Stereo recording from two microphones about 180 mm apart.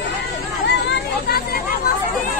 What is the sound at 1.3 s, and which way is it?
Chatter, 60° left (ahead or behind).